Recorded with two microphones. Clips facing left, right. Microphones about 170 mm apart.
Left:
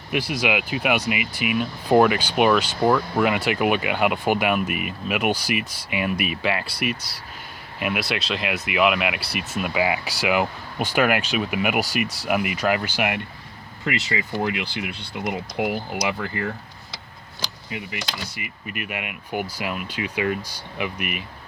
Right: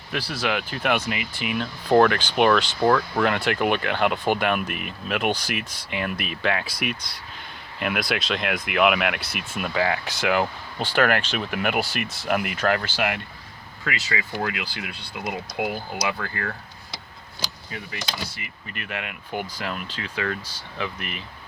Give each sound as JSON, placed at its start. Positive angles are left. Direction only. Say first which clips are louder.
{"t": 0.1, "sound": "speech", "louder": "left 3 dB", "side_deg": 15}
{"t": 12.0, "sound": "speech", "louder": "left 3 dB", "side_deg": 35}
{"t": 12.3, "sound": "speech", "louder": "even", "side_deg": 0}
{"t": 15.2, "sound": "speech", "louder": "left 2 dB", "side_deg": 0}
{"t": 16.0, "sound": "speech", "louder": "left 1 dB", "side_deg": 20}
{"t": 17.7, "sound": "speech", "louder": "left 3 dB", "side_deg": 15}